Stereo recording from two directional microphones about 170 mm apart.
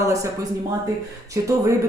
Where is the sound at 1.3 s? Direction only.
20° right (ahead or behind).